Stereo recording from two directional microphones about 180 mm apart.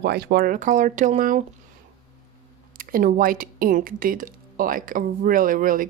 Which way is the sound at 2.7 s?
50° right (ahead or behind).